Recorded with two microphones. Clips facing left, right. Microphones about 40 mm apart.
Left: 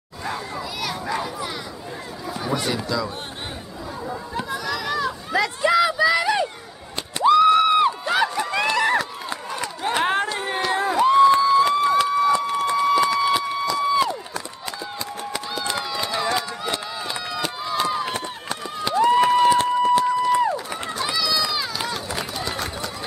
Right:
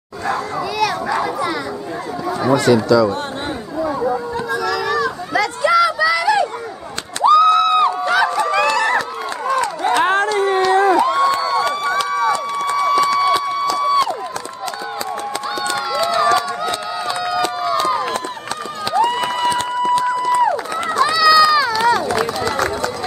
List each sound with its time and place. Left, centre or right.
2.4 s speech: right
4.6 s children playing: right
4.9 s a sound: centre
10.1 s a sound: centre
13.7 s run: centre
16.3 s run: centre
18.9 s a sound: centre
19.8 s run: centre
20.8 s run: right